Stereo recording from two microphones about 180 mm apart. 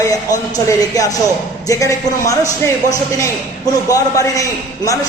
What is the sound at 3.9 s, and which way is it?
Speech, 20° left (ahead or behind).